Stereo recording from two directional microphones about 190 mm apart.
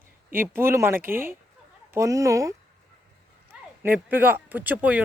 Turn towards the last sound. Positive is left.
turn(degrees=-10)  # may be behind; listen again after turning